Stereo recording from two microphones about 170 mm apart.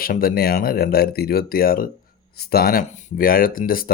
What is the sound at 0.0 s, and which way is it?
Speech, 60° left (ahead or behind).